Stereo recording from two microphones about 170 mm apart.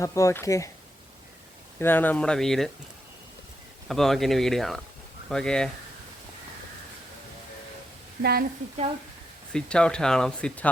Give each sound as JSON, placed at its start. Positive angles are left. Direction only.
{"t": 0.0, "sound": "speech", "side_deg": 20}
{"t": 1.8, "sound": "speech", "side_deg": 10}
{"t": 3.8, "sound": "speech", "side_deg": 0}
{"t": 8.2, "sound": "speech", "side_deg": -65}
{"t": 9.5, "sound": "speech", "side_deg": 5}